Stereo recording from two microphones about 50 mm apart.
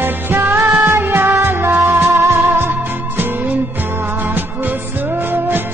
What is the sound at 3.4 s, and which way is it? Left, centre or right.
Music, right.